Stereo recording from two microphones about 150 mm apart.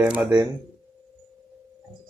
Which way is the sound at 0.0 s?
10° right (ahead or behind).